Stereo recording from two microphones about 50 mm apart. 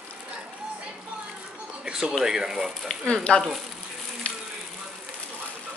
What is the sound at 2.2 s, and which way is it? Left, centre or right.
Speech, centre.